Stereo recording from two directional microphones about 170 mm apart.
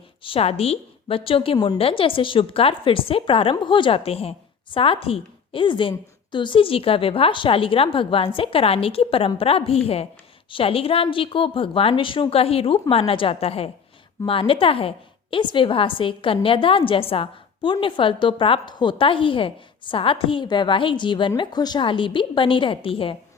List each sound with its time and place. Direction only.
0.2 s a woman's voice: 35° left (ahead or behind)